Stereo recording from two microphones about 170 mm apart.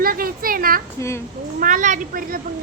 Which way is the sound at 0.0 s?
60° right (ahead or behind).